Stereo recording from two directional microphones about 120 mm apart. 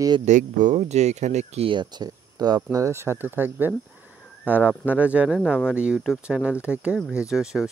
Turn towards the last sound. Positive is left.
turn(degrees=-5)  # may be behind; listen again after turning